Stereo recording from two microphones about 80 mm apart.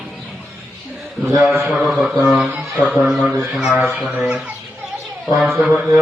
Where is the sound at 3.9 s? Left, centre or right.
Centre.